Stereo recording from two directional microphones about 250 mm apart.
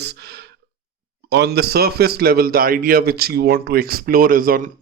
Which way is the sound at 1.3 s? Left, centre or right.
Right.